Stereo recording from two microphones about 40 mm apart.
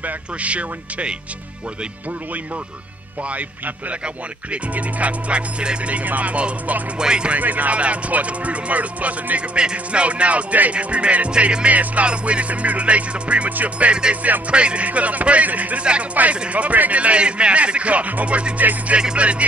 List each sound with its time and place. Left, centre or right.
0.0 s music: right
3.3 s music: right
5.3 s music: right
7.0 s speech: right
7.3 s music: right
9.6 s music: right
14.0 s speech: right
14.9 s music: right
15.8 s speech: right
16.4 s music: right